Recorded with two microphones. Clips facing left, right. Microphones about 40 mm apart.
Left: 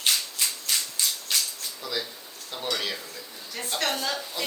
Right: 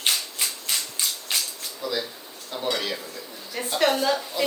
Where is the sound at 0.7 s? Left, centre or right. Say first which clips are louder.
Even; centre.